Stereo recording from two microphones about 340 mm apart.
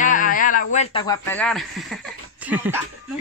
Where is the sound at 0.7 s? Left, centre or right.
Centre.